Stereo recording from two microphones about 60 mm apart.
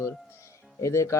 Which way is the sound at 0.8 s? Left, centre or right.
Left.